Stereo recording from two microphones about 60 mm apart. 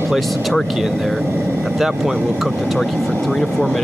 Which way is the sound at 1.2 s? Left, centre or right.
Right.